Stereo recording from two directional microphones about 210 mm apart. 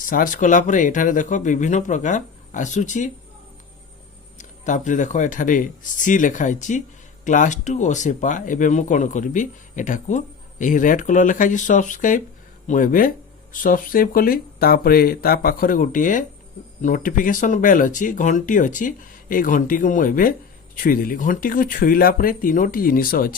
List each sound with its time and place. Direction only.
0.0 s speech: 40° left (ahead or behind)
4.4 s speech: 35° left (ahead or behind)